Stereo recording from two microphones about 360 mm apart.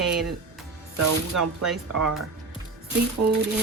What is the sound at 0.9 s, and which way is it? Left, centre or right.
Speech, right.